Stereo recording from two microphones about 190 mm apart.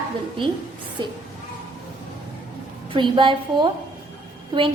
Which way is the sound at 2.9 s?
25° right (ahead or behind).